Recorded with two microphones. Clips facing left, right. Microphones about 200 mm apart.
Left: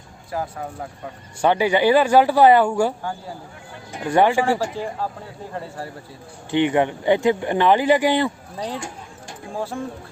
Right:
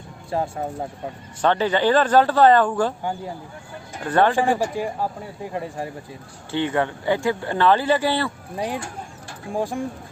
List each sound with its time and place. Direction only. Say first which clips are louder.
0.3 s speech: right 3 dB; 25° right (ahead or behind)
1.4 s speech: left 2 dB; 10° left (ahead or behind)
3.0 s speech: right 2 dB; 20° right (ahead or behind)
4.0 s speech: left 1 dB; 15° left (ahead or behind)
4.4 s speech: right 1 dB; 15° right (ahead or behind)
6.5 s speech: left 4 dB; 15° left (ahead or behind)
8.5 s speech: right 2 dB; 15° right (ahead or behind)